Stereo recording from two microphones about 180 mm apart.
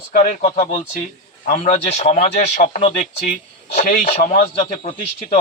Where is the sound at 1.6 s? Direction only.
35° left (ahead or behind).